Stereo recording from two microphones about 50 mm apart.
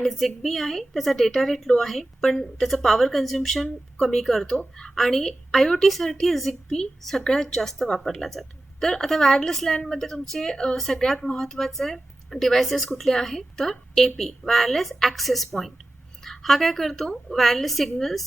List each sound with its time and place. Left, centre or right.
0.0 s a woman's voice: centre